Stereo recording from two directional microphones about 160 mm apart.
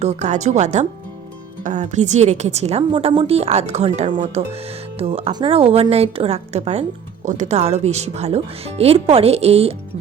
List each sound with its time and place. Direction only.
0.0 s a woman's voice: 45° right (ahead or behind)